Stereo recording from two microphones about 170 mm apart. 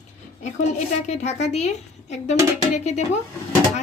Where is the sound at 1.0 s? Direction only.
40° left (ahead or behind).